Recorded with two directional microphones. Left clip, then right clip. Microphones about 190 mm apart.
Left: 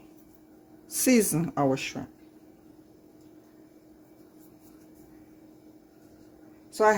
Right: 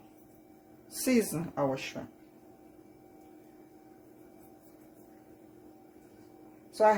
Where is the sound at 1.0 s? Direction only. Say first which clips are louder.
Left 5 dB; 60° left (ahead or behind).